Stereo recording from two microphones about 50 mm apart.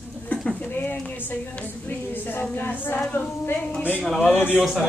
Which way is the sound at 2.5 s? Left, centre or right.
Left.